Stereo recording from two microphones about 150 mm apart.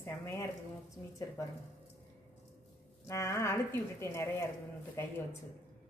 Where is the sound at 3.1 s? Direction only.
20° left (ahead or behind).